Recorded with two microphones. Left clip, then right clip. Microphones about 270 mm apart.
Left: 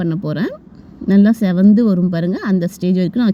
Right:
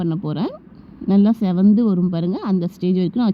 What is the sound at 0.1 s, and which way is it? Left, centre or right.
Speech, centre.